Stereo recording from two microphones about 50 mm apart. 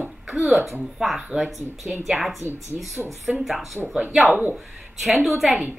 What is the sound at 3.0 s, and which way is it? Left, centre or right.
Speech, right.